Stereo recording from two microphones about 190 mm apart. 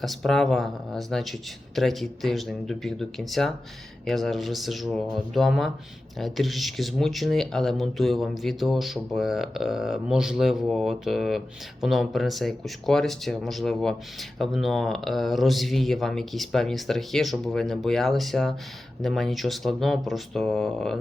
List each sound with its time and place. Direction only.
0.0 s speech: centre (ahead or behind)